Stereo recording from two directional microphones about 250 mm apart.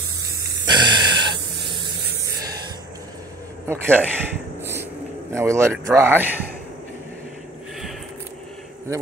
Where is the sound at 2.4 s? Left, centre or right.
Centre.